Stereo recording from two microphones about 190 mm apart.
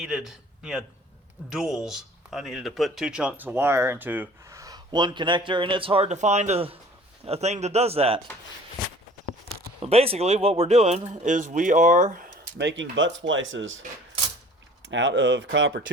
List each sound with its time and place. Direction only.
0.0 s a man's voice: 5° right (ahead or behind); by 8.2 s 30° right (ahead or behind)
9.5 s speech: 30° right (ahead or behind)
12.5 s speech: 75° right (ahead or behind)
14.8 s speech: 70° right (ahead or behind)